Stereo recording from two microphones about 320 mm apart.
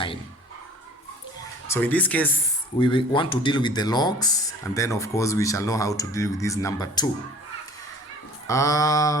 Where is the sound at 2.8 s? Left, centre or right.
Centre.